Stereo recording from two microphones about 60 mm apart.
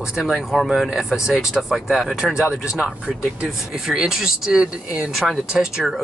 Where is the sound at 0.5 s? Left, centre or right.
Centre.